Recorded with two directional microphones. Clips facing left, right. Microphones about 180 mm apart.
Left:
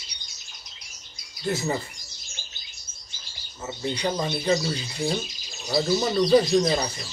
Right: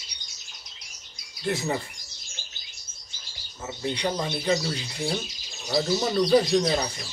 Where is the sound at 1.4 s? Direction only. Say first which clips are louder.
Left 1 dB; centre (ahead or behind).